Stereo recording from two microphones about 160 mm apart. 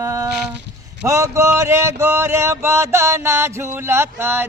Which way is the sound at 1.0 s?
20° right (ahead or behind).